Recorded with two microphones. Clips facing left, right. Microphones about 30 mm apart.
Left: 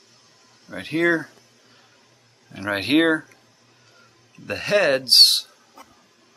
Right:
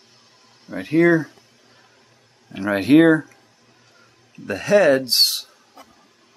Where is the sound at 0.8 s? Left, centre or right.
Left.